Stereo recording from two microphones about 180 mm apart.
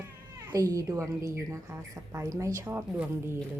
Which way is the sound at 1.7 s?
15° right (ahead or behind).